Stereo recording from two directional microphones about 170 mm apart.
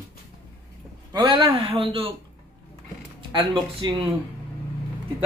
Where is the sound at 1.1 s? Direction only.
25° right (ahead or behind).